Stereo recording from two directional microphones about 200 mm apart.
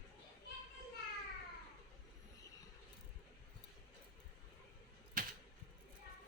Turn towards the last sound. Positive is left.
turn(degrees=-45)  # may be behind; listen again after turning